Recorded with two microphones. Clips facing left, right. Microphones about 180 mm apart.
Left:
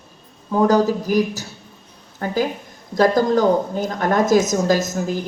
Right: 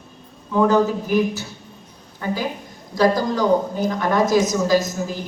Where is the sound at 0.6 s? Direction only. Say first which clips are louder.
Left 1 dB; 35° left (ahead or behind).